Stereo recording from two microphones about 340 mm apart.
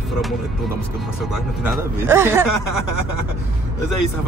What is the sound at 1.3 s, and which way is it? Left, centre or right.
Speech, centre.